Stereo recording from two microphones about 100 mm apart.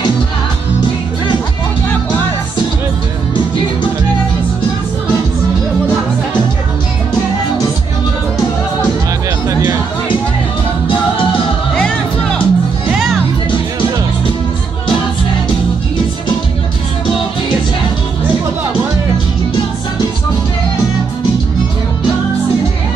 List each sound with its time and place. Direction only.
9.5 s music: 30° right (ahead or behind)
11.7 s music: 10° left (ahead or behind)